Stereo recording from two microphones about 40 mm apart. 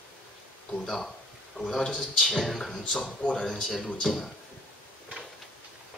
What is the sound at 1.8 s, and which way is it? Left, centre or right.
Speech, left.